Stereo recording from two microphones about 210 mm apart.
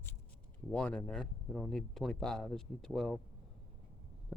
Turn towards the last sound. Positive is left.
turn(degrees=0)  # may be behind; listen again after turning